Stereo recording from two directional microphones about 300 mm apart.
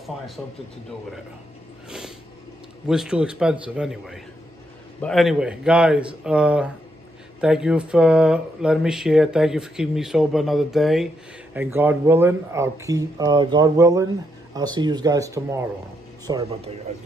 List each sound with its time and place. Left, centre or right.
0.4 s speech: centre
1.9 s a sound: centre
2.9 s speech: centre